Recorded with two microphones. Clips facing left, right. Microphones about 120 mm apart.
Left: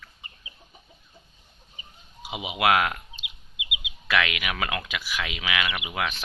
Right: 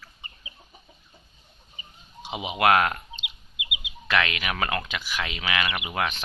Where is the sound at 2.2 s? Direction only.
5° left (ahead or behind).